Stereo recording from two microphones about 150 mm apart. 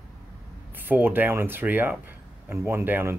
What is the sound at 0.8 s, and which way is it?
Speech, 10° right (ahead or behind).